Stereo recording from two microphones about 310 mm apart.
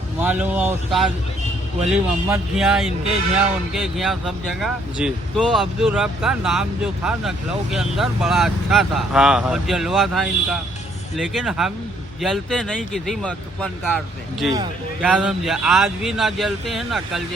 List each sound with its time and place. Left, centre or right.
0.2 s speech: centre